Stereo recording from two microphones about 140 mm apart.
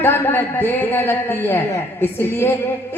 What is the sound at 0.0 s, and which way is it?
A man's voice, 15° left (ahead or behind).